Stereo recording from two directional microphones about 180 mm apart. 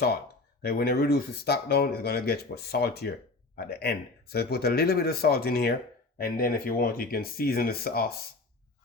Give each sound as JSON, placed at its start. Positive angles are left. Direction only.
{"t": 0.6, "sound": "speech", "side_deg": 60}